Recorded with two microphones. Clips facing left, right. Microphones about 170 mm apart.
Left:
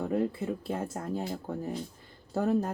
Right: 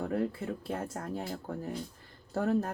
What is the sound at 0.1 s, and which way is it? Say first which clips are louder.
Speech: left 3 dB; 5° left (ahead or behind).